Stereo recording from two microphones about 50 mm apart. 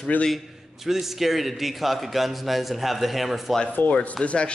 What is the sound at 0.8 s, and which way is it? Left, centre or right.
Speech, centre.